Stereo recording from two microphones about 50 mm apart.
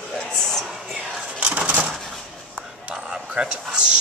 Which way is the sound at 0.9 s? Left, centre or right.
Right.